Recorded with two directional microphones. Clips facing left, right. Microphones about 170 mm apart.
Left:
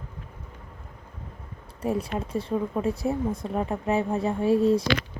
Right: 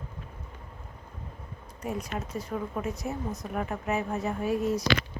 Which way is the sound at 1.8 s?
30° left (ahead or behind).